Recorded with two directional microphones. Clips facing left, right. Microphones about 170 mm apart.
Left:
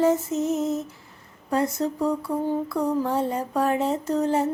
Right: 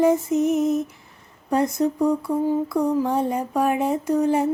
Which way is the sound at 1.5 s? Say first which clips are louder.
Right 3 dB; 15° right (ahead or behind).